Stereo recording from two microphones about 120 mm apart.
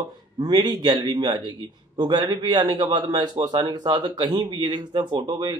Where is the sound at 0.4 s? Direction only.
35° right (ahead or behind).